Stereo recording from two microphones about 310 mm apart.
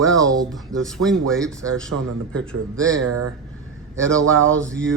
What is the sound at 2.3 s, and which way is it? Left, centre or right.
Speech, centre.